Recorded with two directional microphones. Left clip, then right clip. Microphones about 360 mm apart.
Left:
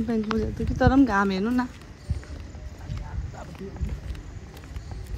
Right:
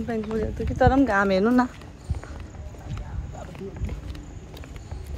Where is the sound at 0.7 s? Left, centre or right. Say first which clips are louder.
Right 1 dB; centre.